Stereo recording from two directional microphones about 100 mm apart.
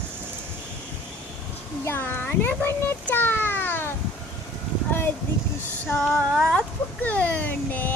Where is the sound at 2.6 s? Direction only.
20° left (ahead or behind).